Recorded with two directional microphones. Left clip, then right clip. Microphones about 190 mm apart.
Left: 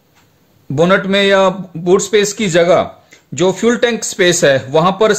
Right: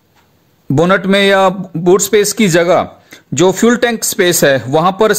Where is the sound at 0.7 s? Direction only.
40° right (ahead or behind).